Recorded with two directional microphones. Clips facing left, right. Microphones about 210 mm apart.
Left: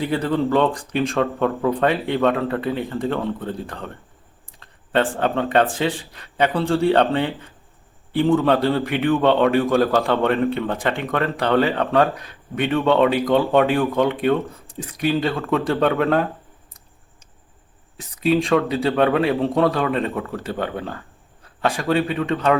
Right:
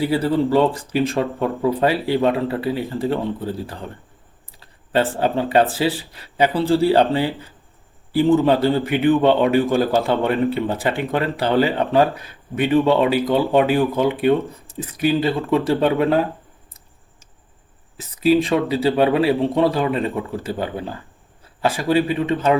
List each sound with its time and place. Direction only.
0.0 s speech: 5° right (ahead or behind)
4.6 s a sound: 5° right (ahead or behind)
5.2 s speech: 5° right (ahead or behind)
17.9 s speech: centre (ahead or behind)